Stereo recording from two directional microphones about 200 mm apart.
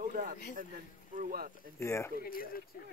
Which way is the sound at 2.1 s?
45° left (ahead or behind).